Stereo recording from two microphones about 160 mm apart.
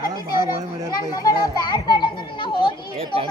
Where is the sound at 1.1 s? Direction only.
25° left (ahead or behind).